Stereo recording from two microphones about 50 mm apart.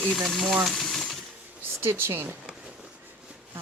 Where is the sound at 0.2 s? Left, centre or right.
Centre.